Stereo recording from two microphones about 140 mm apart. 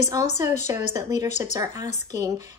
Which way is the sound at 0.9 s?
25° right (ahead or behind).